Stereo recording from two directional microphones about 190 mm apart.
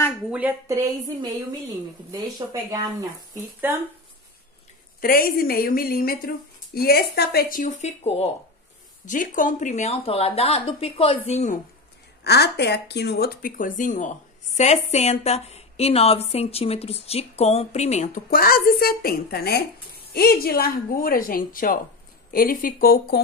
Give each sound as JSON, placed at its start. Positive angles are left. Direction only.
{"t": 0.3, "sound": "speech", "side_deg": -5}
{"t": 5.0, "sound": "a woman's voice", "side_deg": 50}
{"t": 12.2, "sound": "a woman's voice", "side_deg": 60}